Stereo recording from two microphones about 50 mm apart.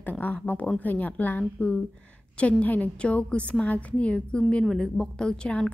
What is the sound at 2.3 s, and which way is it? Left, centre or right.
A woman's voice, left.